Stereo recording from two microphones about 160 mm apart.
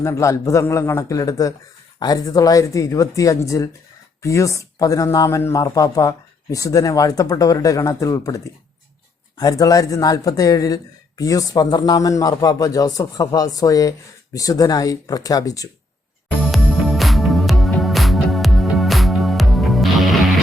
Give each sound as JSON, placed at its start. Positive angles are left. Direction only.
{"t": 0.0, "sound": "speech", "side_deg": 20}
{"t": 9.4, "sound": "speech", "side_deg": 20}
{"t": 16.4, "sound": "music", "side_deg": 0}